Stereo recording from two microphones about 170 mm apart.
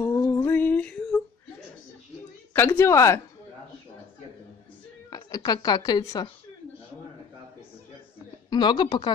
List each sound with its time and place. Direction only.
0.0 s a sound: 15° left (ahead or behind)
2.5 s a woman's voice: 10° left (ahead or behind)
5.1 s speech: 20° left (ahead or behind)
8.5 s a woman's voice: 25° left (ahead or behind)